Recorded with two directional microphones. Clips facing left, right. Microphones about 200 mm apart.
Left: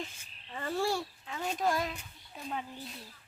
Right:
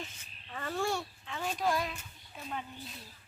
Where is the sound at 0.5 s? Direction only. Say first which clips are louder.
Left 2 dB; 25° left (ahead or behind).